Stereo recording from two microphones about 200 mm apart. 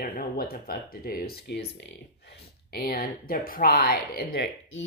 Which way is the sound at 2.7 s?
50° left (ahead or behind).